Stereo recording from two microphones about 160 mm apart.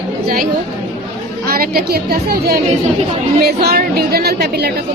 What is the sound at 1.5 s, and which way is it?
A woman's voice, 70° right (ahead or behind).